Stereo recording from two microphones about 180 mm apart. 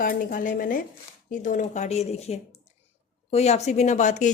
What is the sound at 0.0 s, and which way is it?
A woman's voice, 50° left (ahead or behind).